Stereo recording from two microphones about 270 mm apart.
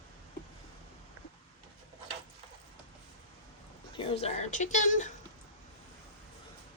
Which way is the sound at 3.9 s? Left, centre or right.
Centre.